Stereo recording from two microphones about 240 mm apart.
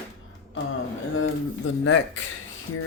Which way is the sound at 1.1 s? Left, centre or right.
Left.